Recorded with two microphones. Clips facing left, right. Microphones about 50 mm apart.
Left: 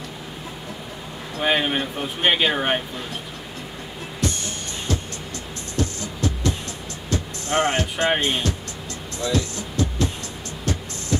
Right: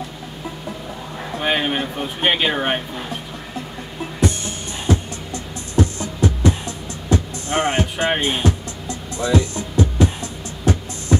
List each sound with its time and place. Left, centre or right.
1.4 s speech: centre
4.2 s music: centre